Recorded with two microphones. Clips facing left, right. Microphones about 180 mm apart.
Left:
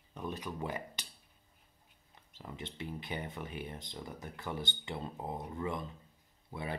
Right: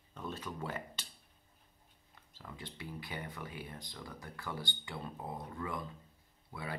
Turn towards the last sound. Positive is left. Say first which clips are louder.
# left 3 dB
turn(degrees=20)  # may be behind; listen again after turning